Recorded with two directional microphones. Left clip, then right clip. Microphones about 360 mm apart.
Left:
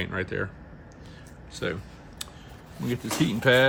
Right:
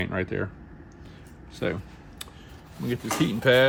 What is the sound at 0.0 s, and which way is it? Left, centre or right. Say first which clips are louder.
Speech: right 1 dB; centre.